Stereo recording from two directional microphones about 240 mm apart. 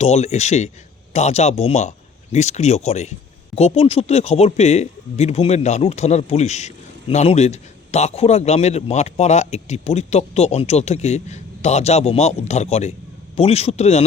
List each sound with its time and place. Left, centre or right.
0.0 s speech: left